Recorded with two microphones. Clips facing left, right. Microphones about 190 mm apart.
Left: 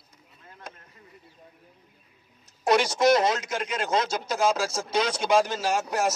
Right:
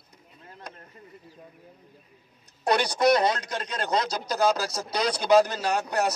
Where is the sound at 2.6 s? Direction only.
Centre (ahead or behind).